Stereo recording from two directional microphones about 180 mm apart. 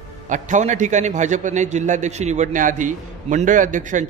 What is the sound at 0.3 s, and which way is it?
A man's voice, 45° right (ahead or behind).